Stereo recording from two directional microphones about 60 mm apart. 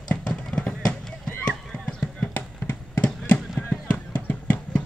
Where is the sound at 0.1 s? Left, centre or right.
Centre.